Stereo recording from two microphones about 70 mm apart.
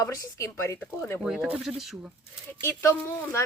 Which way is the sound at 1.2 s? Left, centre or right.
Centre.